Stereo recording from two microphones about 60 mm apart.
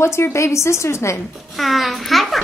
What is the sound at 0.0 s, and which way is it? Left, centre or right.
A woman's voice, left.